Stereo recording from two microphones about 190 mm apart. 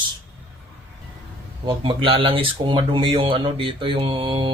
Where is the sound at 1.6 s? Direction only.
25° right (ahead or behind).